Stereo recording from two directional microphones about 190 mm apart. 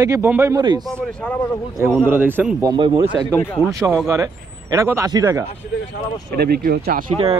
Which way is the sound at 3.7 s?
15° right (ahead or behind).